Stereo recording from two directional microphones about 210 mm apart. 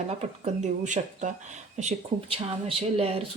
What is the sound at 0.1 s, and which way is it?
Speech, 35° right (ahead or behind).